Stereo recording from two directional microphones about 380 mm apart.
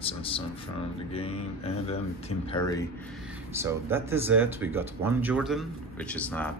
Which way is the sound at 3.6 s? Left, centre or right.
Centre.